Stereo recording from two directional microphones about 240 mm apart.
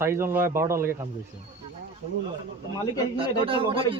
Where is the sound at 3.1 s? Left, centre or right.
Right.